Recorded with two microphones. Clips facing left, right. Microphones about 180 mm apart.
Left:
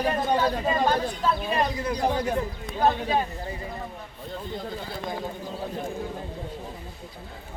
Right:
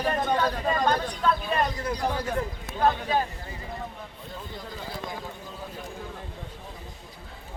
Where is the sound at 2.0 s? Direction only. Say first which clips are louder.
Left 5 dB; 20° left (ahead or behind).